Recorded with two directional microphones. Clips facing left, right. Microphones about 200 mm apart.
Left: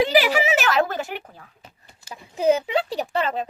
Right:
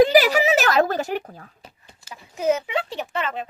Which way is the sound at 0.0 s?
40° right (ahead or behind).